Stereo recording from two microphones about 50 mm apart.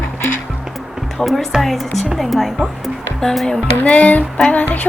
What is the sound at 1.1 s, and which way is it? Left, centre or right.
Speech, centre.